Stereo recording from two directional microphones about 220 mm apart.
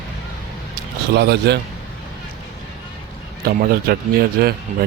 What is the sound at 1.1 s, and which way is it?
Speech, 50° right (ahead or behind).